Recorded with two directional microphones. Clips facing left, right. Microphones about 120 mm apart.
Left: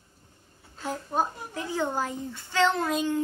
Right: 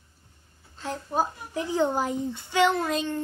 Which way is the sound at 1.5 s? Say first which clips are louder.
Right 4 dB; 15° right (ahead or behind).